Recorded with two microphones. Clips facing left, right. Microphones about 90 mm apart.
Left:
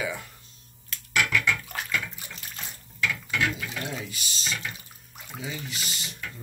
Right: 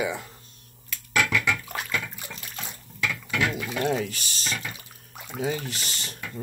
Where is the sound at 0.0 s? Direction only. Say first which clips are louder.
Right 3 dB; 25° right (ahead or behind).